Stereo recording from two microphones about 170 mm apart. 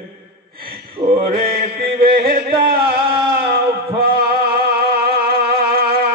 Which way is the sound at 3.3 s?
65° right (ahead or behind).